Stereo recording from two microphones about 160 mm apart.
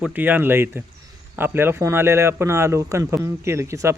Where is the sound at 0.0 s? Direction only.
10° right (ahead or behind).